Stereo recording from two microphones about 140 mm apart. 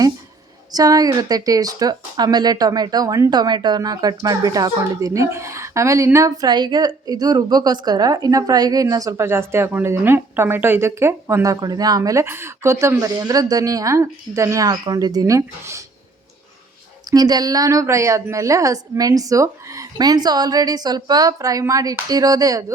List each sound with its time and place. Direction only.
0.7 s speech: 25° right (ahead or behind)
17.1 s speech: 30° right (ahead or behind)